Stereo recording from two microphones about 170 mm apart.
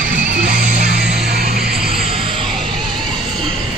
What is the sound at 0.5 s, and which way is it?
Music, 55° right (ahead or behind).